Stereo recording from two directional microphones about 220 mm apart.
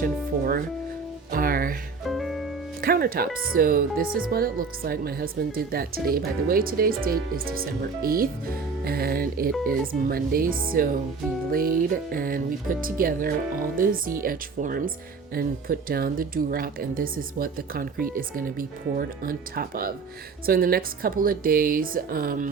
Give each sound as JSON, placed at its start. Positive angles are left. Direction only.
{"t": 0.0, "sound": "speech", "side_deg": -40}
{"t": 2.0, "sound": "music", "side_deg": 0}
{"t": 2.8, "sound": "speech", "side_deg": -40}